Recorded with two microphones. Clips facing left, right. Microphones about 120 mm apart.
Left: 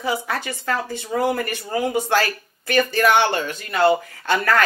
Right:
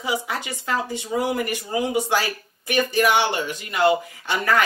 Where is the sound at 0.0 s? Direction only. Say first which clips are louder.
Left 2 dB; 15° right (ahead or behind).